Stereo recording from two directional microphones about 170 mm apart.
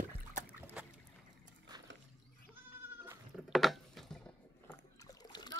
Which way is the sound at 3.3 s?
Centre (ahead or behind).